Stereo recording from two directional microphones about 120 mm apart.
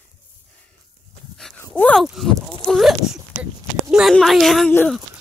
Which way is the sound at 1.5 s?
15° left (ahead or behind).